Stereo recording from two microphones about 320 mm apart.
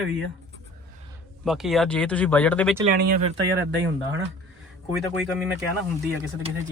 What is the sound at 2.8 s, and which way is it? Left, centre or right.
Speech, right.